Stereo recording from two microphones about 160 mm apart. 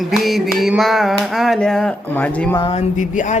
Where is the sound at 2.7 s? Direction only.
45° left (ahead or behind).